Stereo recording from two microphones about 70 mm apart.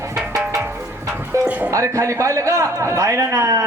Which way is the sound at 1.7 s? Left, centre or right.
Right.